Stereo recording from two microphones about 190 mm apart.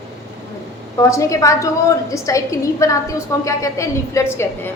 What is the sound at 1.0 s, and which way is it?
A woman's voice, 15° left (ahead or behind).